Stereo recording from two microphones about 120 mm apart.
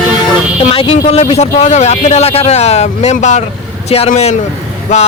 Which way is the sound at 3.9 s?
60° left (ahead or behind).